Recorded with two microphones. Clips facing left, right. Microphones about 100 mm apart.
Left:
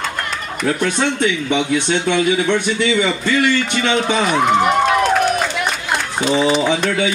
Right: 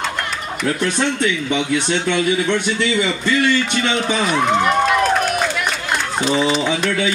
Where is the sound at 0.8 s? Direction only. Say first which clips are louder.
Even; 20° left (ahead or behind).